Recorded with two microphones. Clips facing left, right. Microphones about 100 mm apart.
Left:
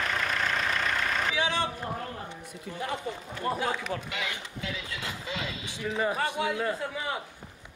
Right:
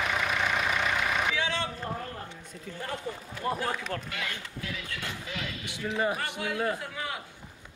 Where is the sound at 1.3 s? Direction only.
15° left (ahead or behind).